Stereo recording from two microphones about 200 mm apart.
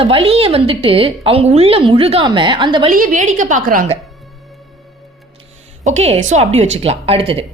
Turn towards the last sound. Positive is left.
turn(degrees=-30)  # may be behind; listen again after turning